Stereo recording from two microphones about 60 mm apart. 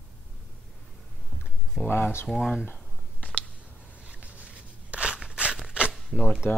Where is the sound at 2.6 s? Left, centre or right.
Left.